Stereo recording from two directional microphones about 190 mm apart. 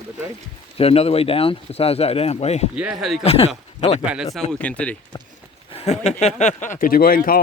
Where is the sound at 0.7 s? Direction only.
30° left (ahead or behind).